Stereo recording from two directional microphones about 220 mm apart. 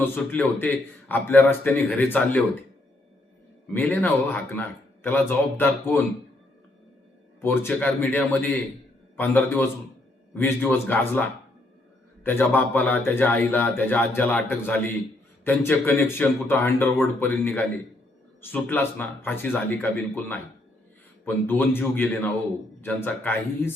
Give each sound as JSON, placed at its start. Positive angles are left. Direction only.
{"t": 0.0, "sound": "a man's voice", "side_deg": 10}
{"t": 3.7, "sound": "a man's voice", "side_deg": 10}
{"t": 7.4, "sound": "a man's voice", "side_deg": 10}